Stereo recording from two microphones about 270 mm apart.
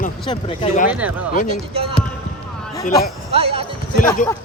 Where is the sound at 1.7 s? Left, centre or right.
Right.